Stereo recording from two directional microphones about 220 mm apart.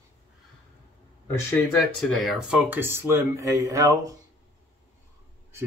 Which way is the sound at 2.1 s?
Centre (ahead or behind).